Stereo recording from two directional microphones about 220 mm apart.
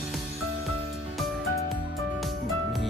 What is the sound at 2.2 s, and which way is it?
Music, centre (ahead or behind).